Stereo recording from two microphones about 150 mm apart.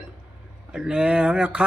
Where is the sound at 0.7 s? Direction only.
5° right (ahead or behind).